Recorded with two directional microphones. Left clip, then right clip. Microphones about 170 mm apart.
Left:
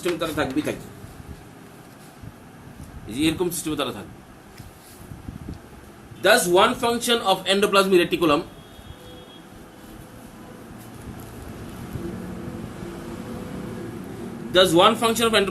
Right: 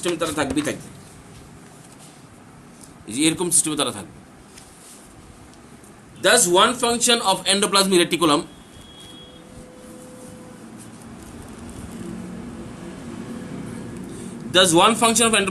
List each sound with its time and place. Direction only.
0.0 s a man's voice: 65° right (ahead or behind)
3.1 s a man's voice: 60° right (ahead or behind)
6.2 s a man's voice: 60° right (ahead or behind)
14.5 s a man's voice: 65° right (ahead or behind)